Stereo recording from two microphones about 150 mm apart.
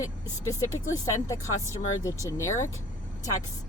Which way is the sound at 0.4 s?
20° left (ahead or behind).